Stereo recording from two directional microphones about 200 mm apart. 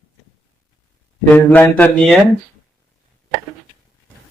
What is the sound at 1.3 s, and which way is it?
Mantra, 10° left (ahead or behind).